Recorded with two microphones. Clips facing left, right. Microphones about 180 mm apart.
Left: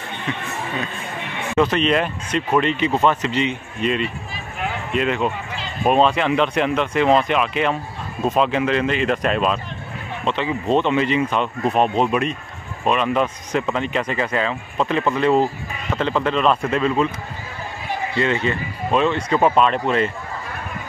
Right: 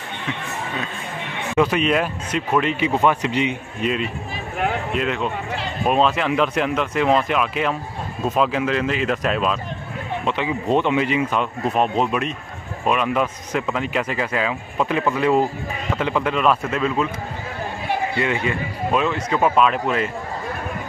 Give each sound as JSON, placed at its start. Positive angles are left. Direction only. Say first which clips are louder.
{"t": 1.6, "sound": "speech", "louder": "left 1 dB", "side_deg": -10}
{"t": 10.2, "sound": "speech", "louder": "left 2 dB", "side_deg": -10}
{"t": 18.2, "sound": "speech", "louder": "left 1 dB", "side_deg": -15}